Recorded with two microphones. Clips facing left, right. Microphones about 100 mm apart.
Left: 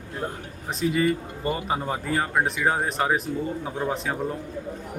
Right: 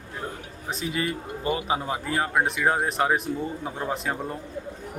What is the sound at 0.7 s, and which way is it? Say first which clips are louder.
Speech: left 7 dB; centre (ahead or behind).